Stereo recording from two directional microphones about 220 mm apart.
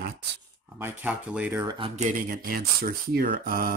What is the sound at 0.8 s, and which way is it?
Speech, 10° right (ahead or behind).